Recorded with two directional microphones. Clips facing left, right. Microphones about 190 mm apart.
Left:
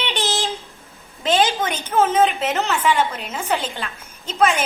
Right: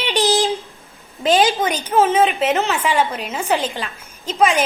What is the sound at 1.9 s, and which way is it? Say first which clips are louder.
A woman's voice: right 1 dB; 10° right (ahead or behind).